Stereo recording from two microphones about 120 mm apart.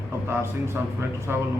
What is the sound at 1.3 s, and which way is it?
Speech, 15° right (ahead or behind).